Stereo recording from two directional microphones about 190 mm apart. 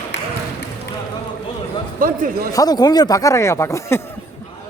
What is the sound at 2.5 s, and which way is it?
Speech, 20° left (ahead or behind).